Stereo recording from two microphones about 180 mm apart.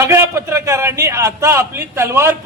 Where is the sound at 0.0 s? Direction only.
15° right (ahead or behind).